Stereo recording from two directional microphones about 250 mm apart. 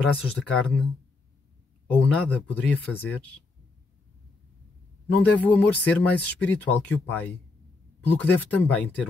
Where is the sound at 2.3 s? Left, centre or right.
Centre.